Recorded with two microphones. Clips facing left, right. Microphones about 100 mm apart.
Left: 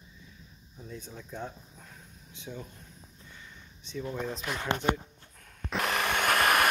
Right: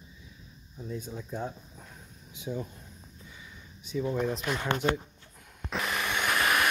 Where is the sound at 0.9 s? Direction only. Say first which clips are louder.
Right 4 dB; 10° right (ahead or behind).